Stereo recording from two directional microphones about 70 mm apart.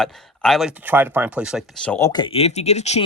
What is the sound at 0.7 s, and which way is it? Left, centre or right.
Speech, right.